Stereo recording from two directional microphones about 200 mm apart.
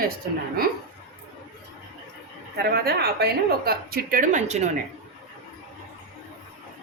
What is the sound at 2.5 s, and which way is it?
A woman's voice, 50° right (ahead or behind).